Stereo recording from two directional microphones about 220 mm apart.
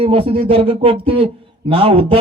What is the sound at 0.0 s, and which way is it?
A man's voice, 25° right (ahead or behind).